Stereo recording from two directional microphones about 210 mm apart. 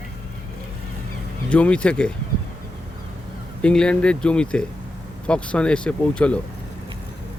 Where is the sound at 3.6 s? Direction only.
5° left (ahead or behind).